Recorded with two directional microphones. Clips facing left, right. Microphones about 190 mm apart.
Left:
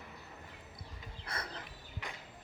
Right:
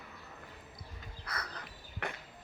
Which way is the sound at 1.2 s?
25° left (ahead or behind).